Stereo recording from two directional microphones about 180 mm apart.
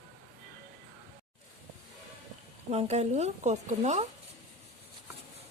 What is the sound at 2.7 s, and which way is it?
Speech, 35° right (ahead or behind).